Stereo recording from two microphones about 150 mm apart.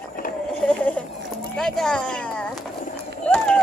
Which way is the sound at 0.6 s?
10° left (ahead or behind).